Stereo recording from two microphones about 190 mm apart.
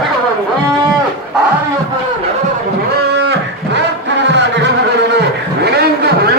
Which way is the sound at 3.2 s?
65° right (ahead or behind).